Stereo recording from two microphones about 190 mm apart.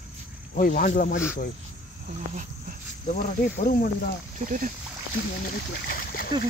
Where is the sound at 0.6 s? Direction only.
45° left (ahead or behind).